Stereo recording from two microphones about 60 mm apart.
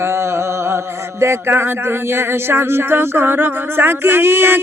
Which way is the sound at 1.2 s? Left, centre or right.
Right.